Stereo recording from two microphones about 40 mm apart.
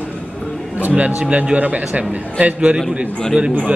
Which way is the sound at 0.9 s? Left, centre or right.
Right.